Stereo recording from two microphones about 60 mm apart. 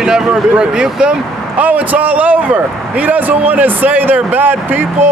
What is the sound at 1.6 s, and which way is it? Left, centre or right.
A man's voice, right.